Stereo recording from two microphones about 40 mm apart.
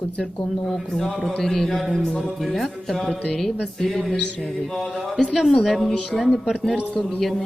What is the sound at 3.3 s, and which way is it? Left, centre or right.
Speech, centre.